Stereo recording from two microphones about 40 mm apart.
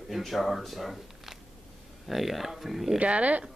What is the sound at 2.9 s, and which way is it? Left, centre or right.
Speech, right.